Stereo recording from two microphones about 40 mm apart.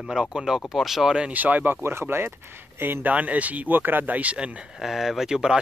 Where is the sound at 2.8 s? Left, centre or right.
Right.